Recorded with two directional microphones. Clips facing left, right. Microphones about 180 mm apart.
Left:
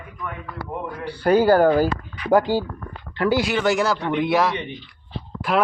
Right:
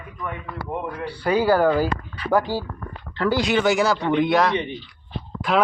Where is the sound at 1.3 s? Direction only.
50° left (ahead or behind).